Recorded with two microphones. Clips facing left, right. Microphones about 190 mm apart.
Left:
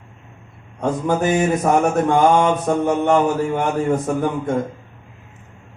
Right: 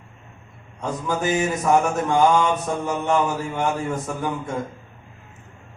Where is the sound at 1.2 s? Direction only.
55° left (ahead or behind).